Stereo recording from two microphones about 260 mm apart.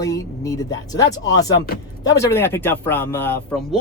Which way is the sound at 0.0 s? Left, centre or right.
Centre.